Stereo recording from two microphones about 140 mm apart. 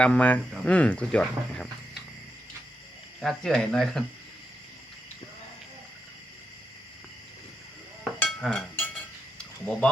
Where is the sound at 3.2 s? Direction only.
Centre (ahead or behind).